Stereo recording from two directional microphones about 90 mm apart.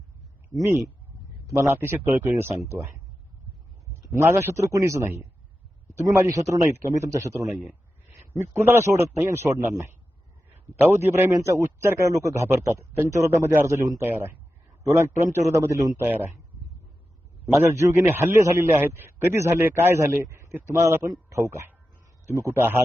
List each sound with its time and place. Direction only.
1.5 s a man's voice: 25° right (ahead or behind)
2.3 s a man's voice: 35° right (ahead or behind)
4.1 s a man's voice: 30° right (ahead or behind)
6.1 s a man's voice: 35° right (ahead or behind)
7.5 s a man's voice: 20° right (ahead or behind)
8.8 s a man's voice: 30° right (ahead or behind)
17.7 s a man's voice: 35° right (ahead or behind)